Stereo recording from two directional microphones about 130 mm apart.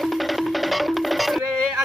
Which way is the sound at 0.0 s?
Centre (ahead or behind).